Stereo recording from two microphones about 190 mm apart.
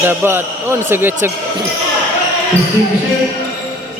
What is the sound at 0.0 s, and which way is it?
Speech, 10° right (ahead or behind).